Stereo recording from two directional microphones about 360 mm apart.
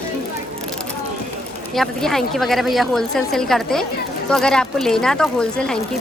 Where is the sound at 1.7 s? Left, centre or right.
Centre.